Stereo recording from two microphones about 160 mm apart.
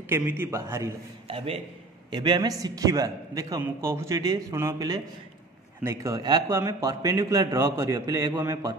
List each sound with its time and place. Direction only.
0.1 s a man's voice: 15° right (ahead or behind)
1.2 s a man's voice: 35° right (ahead or behind); by 8.7 s 20° right (ahead or behind)